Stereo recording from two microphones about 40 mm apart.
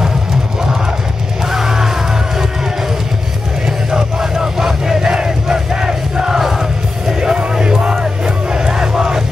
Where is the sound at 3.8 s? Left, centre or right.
Centre.